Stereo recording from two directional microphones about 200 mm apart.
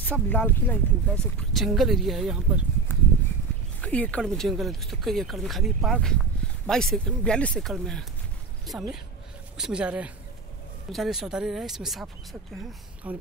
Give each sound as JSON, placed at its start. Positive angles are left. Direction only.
{"t": 0.0, "sound": "speech", "side_deg": 5}
{"t": 2.9, "sound": "a sound", "side_deg": 10}
{"t": 3.8, "sound": "speech", "side_deg": 5}